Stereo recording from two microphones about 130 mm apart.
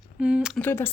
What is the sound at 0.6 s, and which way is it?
Speech, 15° left (ahead or behind).